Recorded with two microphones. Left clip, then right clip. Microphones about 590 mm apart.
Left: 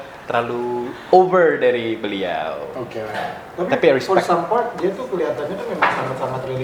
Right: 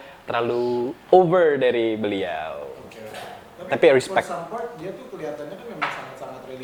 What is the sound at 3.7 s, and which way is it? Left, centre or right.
Speech, right.